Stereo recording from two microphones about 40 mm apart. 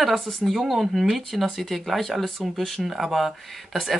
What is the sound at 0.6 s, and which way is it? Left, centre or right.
Speech, centre.